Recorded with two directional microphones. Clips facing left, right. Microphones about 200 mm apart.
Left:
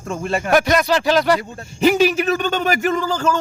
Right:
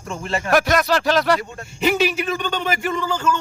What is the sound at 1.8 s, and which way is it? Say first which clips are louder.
A man's voice: left 5 dB; 40° left (ahead or behind).